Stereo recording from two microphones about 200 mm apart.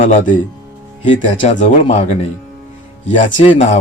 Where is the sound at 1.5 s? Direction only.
40° left (ahead or behind).